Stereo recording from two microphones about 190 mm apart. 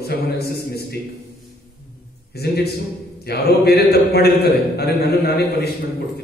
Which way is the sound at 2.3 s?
55° left (ahead or behind).